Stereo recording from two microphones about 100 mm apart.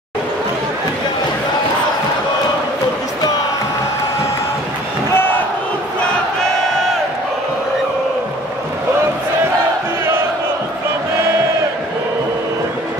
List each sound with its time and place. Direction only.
5.1 s crowd: 20° left (ahead or behind)